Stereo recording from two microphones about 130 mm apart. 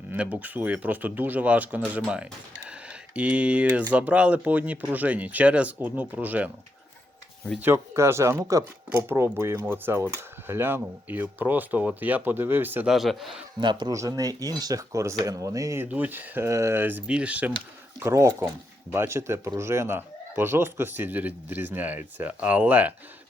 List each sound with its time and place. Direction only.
0.1 s speech: 15° right (ahead or behind)
7.6 s speech: 20° right (ahead or behind)
12.9 s a man's voice: centre (ahead or behind)
13.6 s speech: 35° right (ahead or behind); by 17.5 s 10° right (ahead or behind)
18.0 s speech: 20° right (ahead or behind)